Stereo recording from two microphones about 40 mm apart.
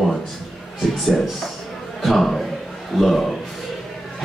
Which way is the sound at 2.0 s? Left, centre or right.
Centre.